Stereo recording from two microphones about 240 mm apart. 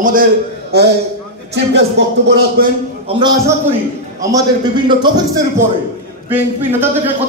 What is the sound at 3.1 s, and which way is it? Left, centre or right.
A man's voice, centre.